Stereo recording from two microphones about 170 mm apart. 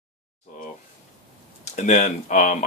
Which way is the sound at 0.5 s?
45° left (ahead or behind).